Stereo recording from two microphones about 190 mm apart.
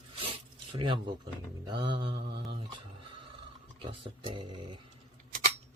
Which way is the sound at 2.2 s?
60° right (ahead or behind).